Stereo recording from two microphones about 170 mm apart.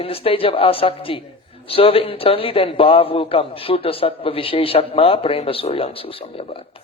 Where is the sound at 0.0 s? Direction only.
35° left (ahead or behind).